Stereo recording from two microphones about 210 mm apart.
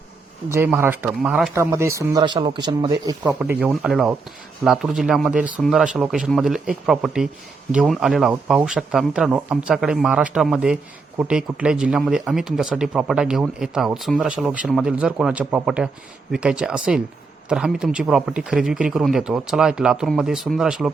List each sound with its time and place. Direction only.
0.4 s speech: 10° right (ahead or behind)
1.5 s speech: 15° right (ahead or behind)